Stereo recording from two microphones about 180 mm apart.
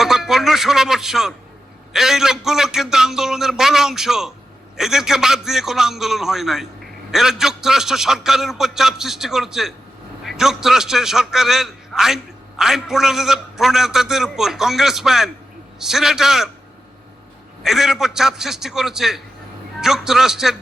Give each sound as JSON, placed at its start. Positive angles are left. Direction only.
{"t": 0.0, "sound": "a sound", "side_deg": 0}
{"t": 1.9, "sound": "a man's voice", "side_deg": 0}
{"t": 17.6, "sound": "a man's voice", "side_deg": 0}